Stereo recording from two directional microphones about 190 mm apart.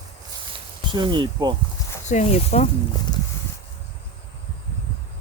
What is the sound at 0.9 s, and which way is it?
Speech, 25° right (ahead or behind).